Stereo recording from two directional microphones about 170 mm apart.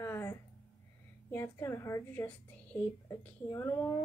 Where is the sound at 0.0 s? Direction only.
15° left (ahead or behind).